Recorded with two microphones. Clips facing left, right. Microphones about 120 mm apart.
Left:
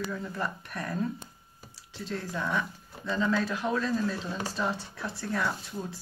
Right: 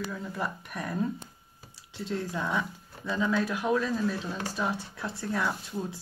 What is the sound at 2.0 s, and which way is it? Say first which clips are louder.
Speech: right 1 dB; 15° right (ahead or behind).